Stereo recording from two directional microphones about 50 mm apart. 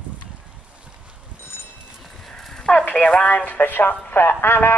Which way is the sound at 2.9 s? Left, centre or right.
Left.